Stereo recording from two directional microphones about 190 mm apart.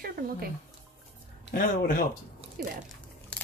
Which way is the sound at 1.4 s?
50° left (ahead or behind).